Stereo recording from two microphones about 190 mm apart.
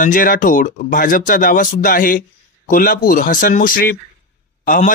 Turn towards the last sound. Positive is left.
turn(degrees=45)  # may be behind; listen again after turning